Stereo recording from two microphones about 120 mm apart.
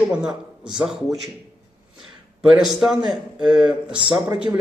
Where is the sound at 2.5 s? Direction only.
5° right (ahead or behind).